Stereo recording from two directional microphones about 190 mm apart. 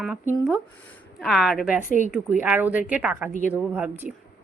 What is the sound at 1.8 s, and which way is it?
Speech, 40° left (ahead or behind).